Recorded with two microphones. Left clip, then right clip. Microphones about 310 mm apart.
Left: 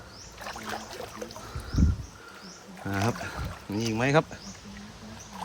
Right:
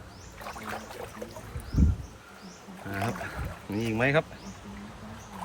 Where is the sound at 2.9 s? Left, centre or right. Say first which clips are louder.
Left 3 dB; centre.